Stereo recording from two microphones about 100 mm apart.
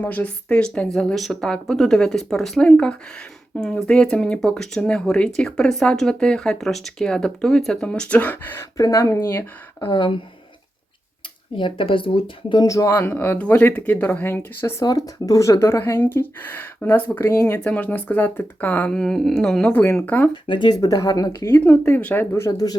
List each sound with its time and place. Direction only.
0.0 s speech: 15° left (ahead or behind)
8.8 s speech: 35° left (ahead or behind)
9.8 s speech: 55° left (ahead or behind)
11.5 s speech: 55° left (ahead or behind)
12.6 s speech: 35° left (ahead or behind)
12.9 s speech: 20° left (ahead or behind)
14.8 s speech: 35° left (ahead or behind); by 18.9 s 15° left (ahead or behind)
18.9 s speech: 5° left (ahead or behind)
20.1 s speech: 20° left (ahead or behind)
20.3 s speech: 55° left (ahead or behind)
20.7 s speech: 35° left (ahead or behind)
21.7 s speech: 20° left (ahead or behind)
22.4 s speech: 40° left (ahead or behind)